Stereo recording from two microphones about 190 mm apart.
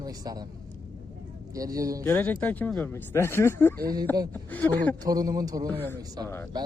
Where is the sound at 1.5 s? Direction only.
20° right (ahead or behind).